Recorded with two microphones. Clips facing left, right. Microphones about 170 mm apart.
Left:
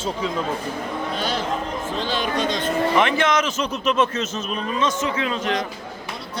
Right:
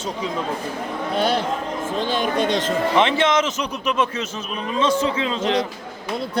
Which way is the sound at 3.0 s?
25° right (ahead or behind).